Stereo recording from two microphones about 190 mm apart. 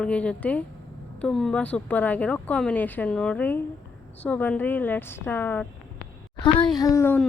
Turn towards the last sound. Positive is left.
turn(degrees=15)  # may be behind; listen again after turning